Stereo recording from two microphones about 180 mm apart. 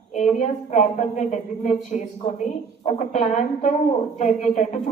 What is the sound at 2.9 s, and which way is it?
Speech, 40° left (ahead or behind).